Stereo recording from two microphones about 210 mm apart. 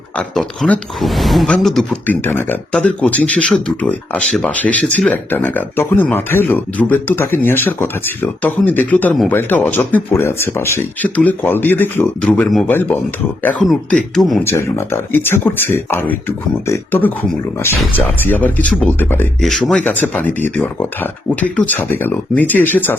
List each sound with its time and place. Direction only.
0.2 s speech: 5° left (ahead or behind)
14.4 s speech: 10° left (ahead or behind)